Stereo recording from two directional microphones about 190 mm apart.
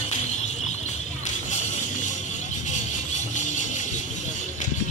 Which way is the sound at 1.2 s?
40° left (ahead or behind).